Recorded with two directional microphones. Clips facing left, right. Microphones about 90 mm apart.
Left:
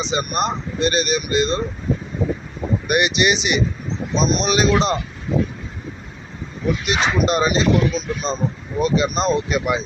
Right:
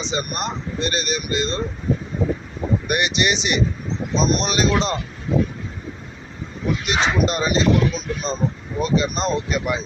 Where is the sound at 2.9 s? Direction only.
15° left (ahead or behind).